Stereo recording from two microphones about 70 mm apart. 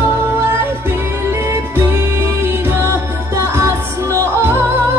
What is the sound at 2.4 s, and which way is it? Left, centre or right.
Music, right.